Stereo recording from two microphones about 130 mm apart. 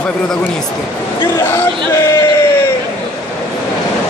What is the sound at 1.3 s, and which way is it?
Speech, 20° left (ahead or behind).